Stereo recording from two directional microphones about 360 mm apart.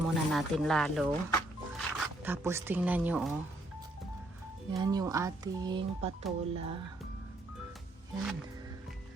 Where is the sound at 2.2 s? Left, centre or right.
Centre.